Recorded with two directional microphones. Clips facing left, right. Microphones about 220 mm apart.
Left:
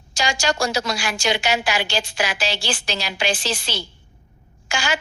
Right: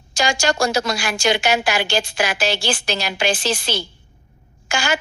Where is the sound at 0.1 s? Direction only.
50° right (ahead or behind).